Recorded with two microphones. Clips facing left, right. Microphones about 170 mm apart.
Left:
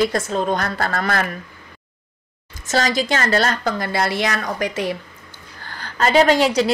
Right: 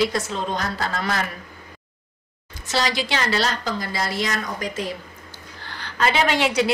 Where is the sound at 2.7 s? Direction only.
45° left (ahead or behind); by 4.9 s 70° left (ahead or behind).